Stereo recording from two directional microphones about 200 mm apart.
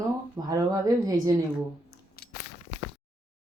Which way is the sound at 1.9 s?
55° left (ahead or behind).